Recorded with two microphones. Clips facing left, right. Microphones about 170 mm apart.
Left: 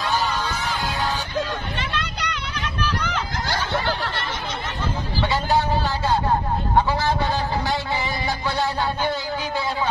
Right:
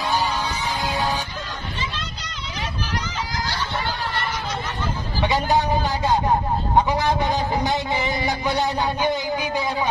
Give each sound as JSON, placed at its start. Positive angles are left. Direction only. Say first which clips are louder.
{"t": 0.3, "sound": "music", "louder": "even", "side_deg": -15}
{"t": 1.8, "sound": "hubbub", "louder": "left 3 dB", "side_deg": 65}
{"t": 5.2, "sound": "a sound", "louder": "right 2 dB", "side_deg": -15}
{"t": 8.5, "sound": "music", "louder": "right 1 dB", "side_deg": -15}